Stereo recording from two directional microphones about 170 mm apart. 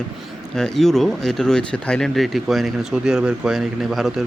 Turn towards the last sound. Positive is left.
turn(degrees=0)  # may be behind; listen again after turning